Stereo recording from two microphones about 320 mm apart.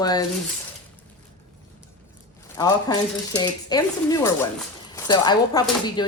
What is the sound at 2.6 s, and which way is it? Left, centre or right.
Speech, centre.